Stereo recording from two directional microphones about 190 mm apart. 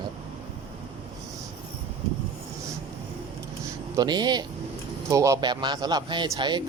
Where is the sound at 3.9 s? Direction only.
20° right (ahead or behind).